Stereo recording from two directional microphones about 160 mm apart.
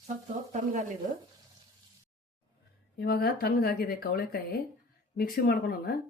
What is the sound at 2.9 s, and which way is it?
Speech, 70° left (ahead or behind).